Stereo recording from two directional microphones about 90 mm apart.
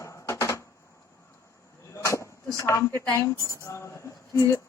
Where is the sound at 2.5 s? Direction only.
35° left (ahead or behind).